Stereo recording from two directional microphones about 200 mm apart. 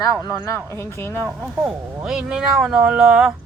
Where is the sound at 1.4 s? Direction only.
Centre (ahead or behind).